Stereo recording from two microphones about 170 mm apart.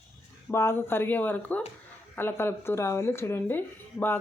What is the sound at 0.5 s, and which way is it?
Speech, 15° left (ahead or behind).